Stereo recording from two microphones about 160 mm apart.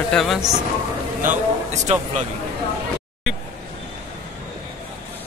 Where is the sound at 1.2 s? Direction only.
50° right (ahead or behind).